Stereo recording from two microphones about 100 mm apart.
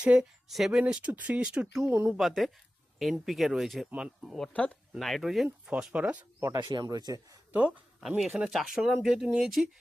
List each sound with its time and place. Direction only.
0.0 s speech: 10° right (ahead or behind)
1.8 s speech: 20° right (ahead or behind)
2.1 s speech: centre (ahead or behind)
4.4 s speech: 15° left (ahead or behind)
4.9 s speech: centre (ahead or behind); by 6.2 s 15° right (ahead or behind)
6.7 s a man's voice: 45° right (ahead or behind)
8.0 s speech: 5° right (ahead or behind)